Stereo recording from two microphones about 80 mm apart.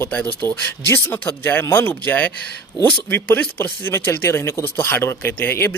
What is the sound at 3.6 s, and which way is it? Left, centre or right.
Speech, left.